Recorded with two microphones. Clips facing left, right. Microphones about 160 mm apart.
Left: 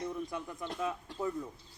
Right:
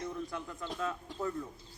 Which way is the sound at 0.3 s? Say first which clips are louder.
Left 1 dB; 15° left (ahead or behind).